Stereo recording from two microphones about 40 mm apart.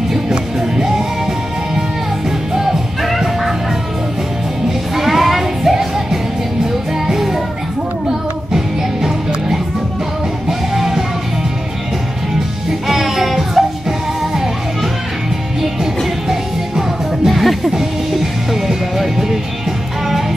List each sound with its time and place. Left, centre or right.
0.3 s music: centre
2.5 s music: centre
4.9 s music: centre
8.5 s music: centre
10.7 s music: centre
12.8 s music: centre
16.3 s music: centre
17.3 s music: centre